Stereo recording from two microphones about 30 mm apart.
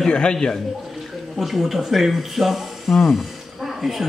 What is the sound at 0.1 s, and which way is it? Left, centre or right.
Speech, left.